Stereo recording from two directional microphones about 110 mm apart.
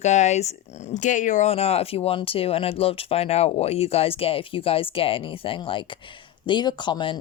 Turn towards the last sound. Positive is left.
turn(degrees=45)  # may be behind; listen again after turning